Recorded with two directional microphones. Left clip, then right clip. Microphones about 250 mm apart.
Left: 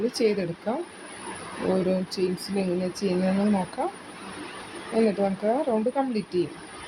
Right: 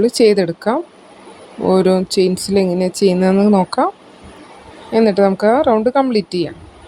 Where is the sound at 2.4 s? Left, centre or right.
Right.